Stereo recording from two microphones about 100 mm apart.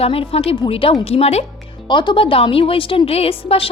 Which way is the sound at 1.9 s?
50° left (ahead or behind).